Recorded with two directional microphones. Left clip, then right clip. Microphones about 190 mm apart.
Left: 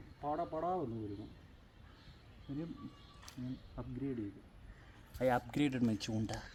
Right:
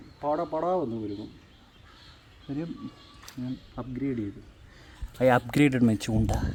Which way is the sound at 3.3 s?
5° left (ahead or behind).